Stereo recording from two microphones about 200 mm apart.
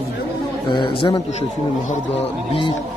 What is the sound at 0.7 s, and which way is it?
Speech, 25° left (ahead or behind).